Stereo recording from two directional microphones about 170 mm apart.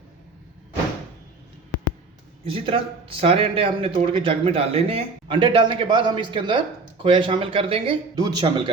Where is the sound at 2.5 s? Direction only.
30° right (ahead or behind).